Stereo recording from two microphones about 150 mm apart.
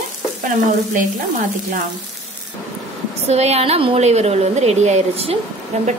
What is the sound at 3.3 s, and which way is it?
A woman's voice, 45° right (ahead or behind).